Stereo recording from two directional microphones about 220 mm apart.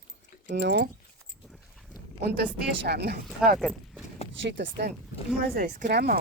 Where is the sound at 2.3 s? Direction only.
50° right (ahead or behind).